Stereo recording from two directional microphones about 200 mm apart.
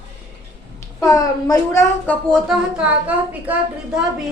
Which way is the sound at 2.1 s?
5° left (ahead or behind).